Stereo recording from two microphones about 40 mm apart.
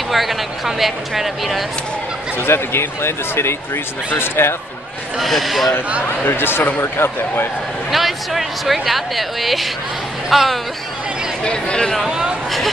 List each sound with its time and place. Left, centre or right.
0.1 s speech: centre
2.3 s speech: left
5.1 s speech: centre
6.2 s speech: left
7.9 s speech: centre
11.4 s speech: left
12.1 s a sound: right